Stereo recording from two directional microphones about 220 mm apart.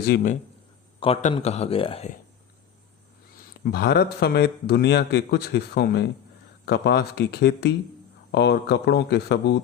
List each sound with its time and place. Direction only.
0.0 s a man's voice: 45° left (ahead or behind)
0.9 s speech: 25° left (ahead or behind)
3.6 s a man's voice: 45° left (ahead or behind)